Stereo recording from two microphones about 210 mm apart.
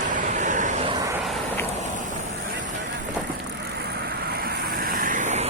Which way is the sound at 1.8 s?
35° right (ahead or behind).